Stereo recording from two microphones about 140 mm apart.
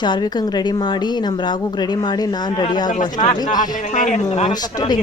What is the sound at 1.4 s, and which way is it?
Speech, 30° left (ahead or behind).